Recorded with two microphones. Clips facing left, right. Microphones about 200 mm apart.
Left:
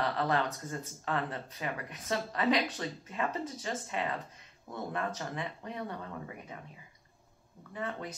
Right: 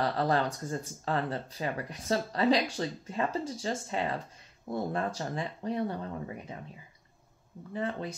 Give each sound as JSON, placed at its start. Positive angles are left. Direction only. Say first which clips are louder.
{"t": 0.0, "sound": "speech", "louder": "right 3 dB", "side_deg": -35}
{"t": 7.7, "sound": "speech", "louder": "right 4 dB", "side_deg": -30}